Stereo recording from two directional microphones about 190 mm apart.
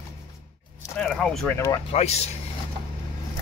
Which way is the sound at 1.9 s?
35° left (ahead or behind).